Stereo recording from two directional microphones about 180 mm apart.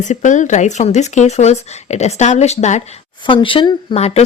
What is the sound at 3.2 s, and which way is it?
Speech, 30° left (ahead or behind).